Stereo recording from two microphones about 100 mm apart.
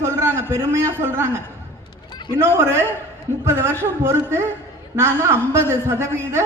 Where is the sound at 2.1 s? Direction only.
50° left (ahead or behind).